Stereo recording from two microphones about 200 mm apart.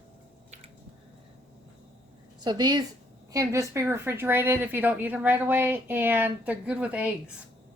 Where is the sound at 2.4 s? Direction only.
20° right (ahead or behind).